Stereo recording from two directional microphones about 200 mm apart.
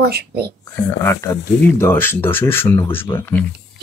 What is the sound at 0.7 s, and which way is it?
Speech, 15° left (ahead or behind).